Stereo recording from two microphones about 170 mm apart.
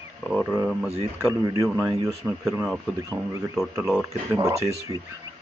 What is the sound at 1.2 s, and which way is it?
Speech, 15° right (ahead or behind).